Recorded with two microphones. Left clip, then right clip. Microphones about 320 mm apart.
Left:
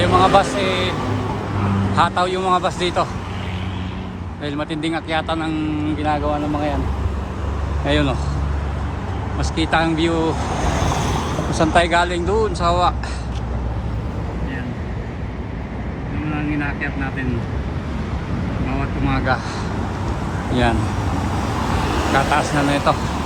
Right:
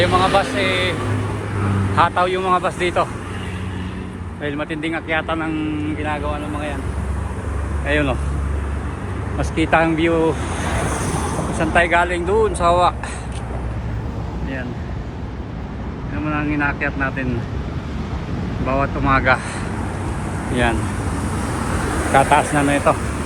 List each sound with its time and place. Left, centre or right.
0.0 s speech: centre
2.0 s speech: centre
4.4 s speech: centre
7.9 s speech: centre
9.6 s speech: centre
10.6 s vehicle: left
11.6 s speech: centre
18.6 s speech: centre
22.1 s speech: centre